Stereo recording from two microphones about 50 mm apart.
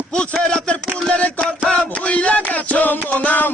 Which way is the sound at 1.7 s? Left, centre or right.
Left.